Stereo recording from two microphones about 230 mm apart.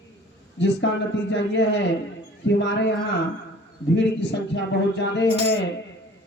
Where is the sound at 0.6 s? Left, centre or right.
Left.